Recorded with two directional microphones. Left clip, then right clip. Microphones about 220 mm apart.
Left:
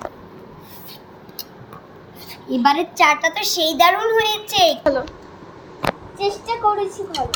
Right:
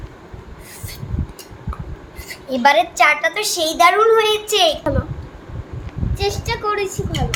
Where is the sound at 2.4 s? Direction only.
40° right (ahead or behind).